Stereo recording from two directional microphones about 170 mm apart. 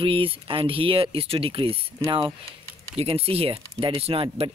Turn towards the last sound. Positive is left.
turn(degrees=-35)  # may be behind; listen again after turning